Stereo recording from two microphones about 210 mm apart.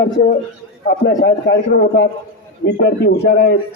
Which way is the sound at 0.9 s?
45° left (ahead or behind).